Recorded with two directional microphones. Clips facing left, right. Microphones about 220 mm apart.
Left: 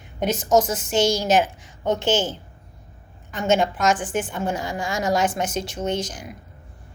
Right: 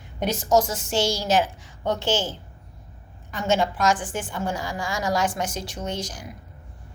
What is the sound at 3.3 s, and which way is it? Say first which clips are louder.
Speech: left 2 dB; 20° left (ahead or behind).